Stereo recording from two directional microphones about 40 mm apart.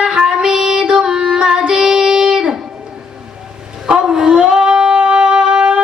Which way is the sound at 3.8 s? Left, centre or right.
Centre.